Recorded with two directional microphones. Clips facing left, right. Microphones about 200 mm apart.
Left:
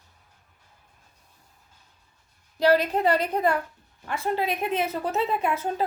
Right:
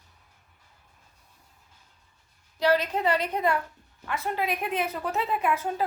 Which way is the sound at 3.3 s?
30° left (ahead or behind).